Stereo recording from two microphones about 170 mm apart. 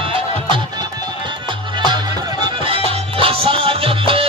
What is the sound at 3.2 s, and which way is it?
Music, 35° right (ahead or behind).